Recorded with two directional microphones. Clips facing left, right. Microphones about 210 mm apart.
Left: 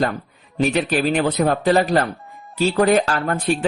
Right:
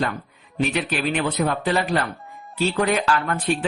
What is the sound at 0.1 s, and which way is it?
Speech, 35° left (ahead or behind).